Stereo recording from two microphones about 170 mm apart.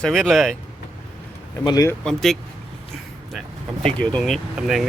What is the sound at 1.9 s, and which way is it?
Speech, 5° left (ahead or behind).